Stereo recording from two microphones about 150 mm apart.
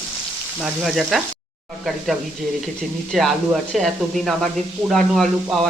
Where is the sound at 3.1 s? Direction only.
Centre (ahead or behind).